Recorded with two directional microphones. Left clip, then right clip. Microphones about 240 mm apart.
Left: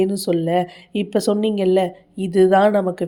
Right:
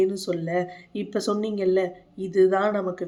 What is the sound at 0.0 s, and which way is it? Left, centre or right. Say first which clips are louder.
A woman's voice: left 5 dB; left.